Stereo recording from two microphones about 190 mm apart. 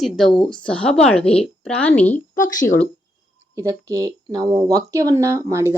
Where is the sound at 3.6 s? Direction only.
15° right (ahead or behind).